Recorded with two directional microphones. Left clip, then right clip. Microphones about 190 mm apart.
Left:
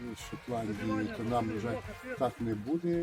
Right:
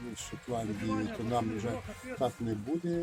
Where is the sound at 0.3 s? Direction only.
Centre (ahead or behind).